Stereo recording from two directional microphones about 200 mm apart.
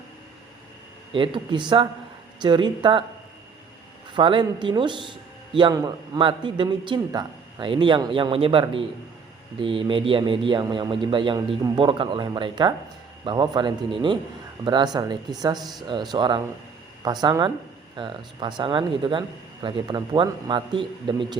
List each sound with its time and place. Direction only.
1.1 s a man's voice: 25° right (ahead or behind)
4.1 s a man's voice: 25° right (ahead or behind)
15.5 s a man's voice: centre (ahead or behind)
15.9 s a man's voice: 25° right (ahead or behind)